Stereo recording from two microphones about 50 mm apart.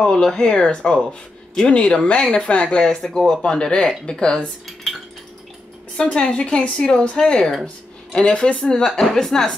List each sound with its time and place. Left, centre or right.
0.0 s speech: centre
5.9 s a woman's voice: centre